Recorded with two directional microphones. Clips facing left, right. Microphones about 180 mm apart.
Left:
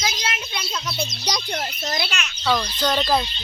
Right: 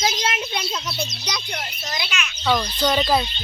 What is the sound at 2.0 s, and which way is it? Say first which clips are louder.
Speech: right 2 dB; 35° left (ahead or behind).